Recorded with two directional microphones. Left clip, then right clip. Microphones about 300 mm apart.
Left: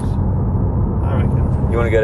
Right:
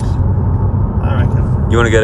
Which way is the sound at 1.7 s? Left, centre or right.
Centre.